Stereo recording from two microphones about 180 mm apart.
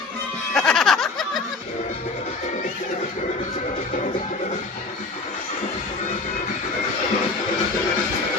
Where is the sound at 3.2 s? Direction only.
40° left (ahead or behind).